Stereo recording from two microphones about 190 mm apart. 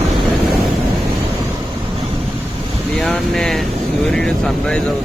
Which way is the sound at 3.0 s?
Centre (ahead or behind).